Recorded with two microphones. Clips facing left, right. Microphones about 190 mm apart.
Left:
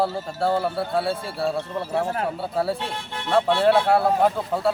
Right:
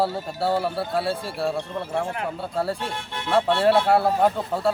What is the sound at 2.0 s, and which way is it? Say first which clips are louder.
Speech: left 3 dB; 40° left (ahead or behind).